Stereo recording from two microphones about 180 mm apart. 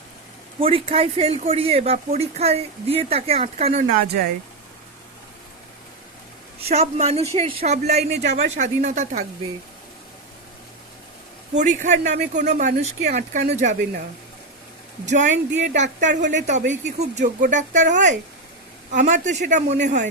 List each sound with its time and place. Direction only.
0.6 s speech: 30° right (ahead or behind)
6.7 s speech: 35° right (ahead or behind)
11.5 s speech: 45° right (ahead or behind)
15.0 s speech: 45° right (ahead or behind)